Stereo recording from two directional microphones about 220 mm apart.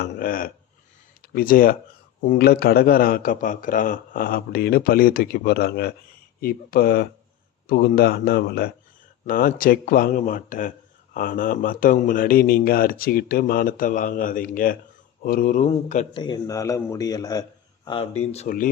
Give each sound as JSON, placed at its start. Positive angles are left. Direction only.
{"t": 0.0, "sound": "speech", "side_deg": 40}
{"t": 16.1, "sound": "a man's voice", "side_deg": 20}